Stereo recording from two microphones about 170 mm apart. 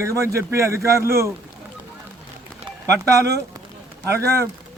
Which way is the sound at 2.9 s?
20° right (ahead or behind).